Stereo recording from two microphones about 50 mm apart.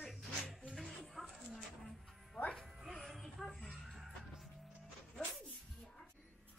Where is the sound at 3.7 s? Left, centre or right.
Centre.